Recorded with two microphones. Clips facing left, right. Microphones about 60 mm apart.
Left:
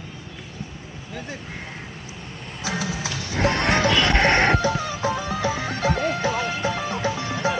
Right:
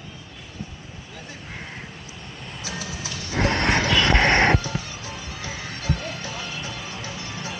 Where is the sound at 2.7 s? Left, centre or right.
Left.